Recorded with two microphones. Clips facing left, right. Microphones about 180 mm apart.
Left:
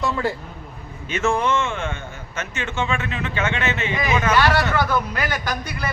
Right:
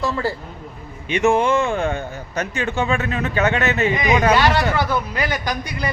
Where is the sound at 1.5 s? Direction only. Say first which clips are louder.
Right 4 dB; 35° right (ahead or behind).